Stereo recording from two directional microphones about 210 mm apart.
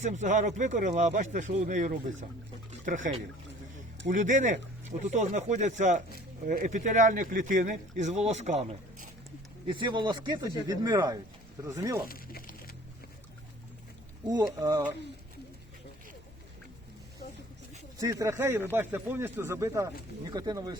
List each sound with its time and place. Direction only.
0.0 s speech: 35° right (ahead or behind)
9.6 s speech: 25° right (ahead or behind)
12.0 s a sound: 45° left (ahead or behind)
14.3 s speech: 20° right (ahead or behind)
18.0 s speech: 15° right (ahead or behind)